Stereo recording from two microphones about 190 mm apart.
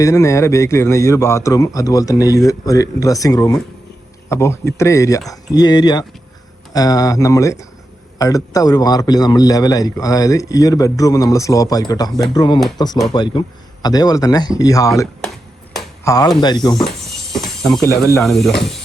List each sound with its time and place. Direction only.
0.0 s a man's voice: 15° left (ahead or behind)
16.0 s a man's voice: 20° left (ahead or behind)
17.1 s music: centre (ahead or behind)
18.2 s speech: centre (ahead or behind)